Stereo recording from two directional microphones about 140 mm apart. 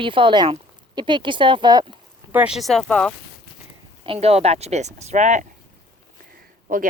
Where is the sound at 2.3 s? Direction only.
10° right (ahead or behind); by 3.1 s 5° left (ahead or behind).